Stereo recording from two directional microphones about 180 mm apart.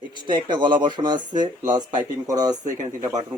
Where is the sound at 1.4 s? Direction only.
45° right (ahead or behind).